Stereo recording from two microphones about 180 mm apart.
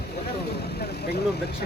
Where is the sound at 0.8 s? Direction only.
60° left (ahead or behind).